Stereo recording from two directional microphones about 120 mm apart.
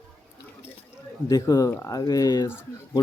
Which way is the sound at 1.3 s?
30° left (ahead or behind).